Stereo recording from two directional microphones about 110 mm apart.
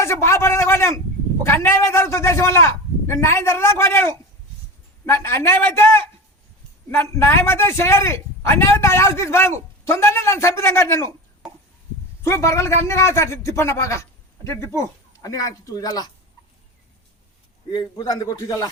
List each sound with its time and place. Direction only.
0.0 s a man's voice: 25° left (ahead or behind)
6.9 s a man's voice: 20° left (ahead or behind)
12.2 s a man's voice: 25° left (ahead or behind)
17.7 s speech: 45° left (ahead or behind)